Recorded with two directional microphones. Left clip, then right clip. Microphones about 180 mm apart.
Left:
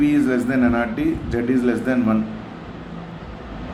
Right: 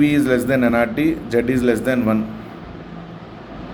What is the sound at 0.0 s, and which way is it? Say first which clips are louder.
A man's voice: right 2 dB; 40° right (ahead or behind).